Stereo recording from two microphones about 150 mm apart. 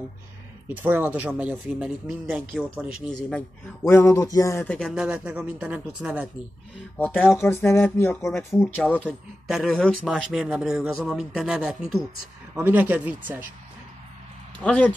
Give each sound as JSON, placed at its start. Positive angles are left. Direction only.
{"t": 0.7, "sound": "speech", "side_deg": -10}
{"t": 3.3, "sound": "speech", "side_deg": 5}
{"t": 3.9, "sound": "a sound", "side_deg": 20}
{"t": 4.6, "sound": "speech", "side_deg": 5}
{"t": 5.0, "sound": "speech", "side_deg": -10}
{"t": 7.0, "sound": "speech", "side_deg": 10}
{"t": 9.5, "sound": "speech", "side_deg": -5}
{"t": 14.6, "sound": "speech", "side_deg": 10}